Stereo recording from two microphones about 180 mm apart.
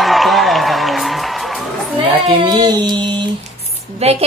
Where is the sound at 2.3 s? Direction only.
20° right (ahead or behind).